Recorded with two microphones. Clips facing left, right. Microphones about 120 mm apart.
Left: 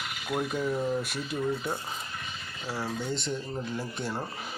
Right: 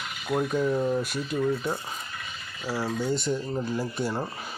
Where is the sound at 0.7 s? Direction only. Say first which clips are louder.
Right 4 dB; 15° right (ahead or behind).